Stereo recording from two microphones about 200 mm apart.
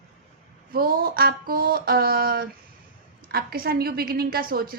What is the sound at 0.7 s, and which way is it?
A woman's voice, 45° right (ahead or behind).